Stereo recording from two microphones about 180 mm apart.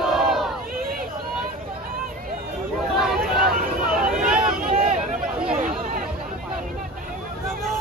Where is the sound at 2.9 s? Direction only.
Centre (ahead or behind).